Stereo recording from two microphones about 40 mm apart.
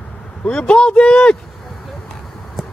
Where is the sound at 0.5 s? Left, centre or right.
Left.